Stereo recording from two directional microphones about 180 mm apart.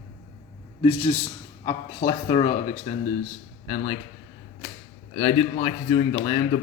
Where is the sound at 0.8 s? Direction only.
35° left (ahead or behind).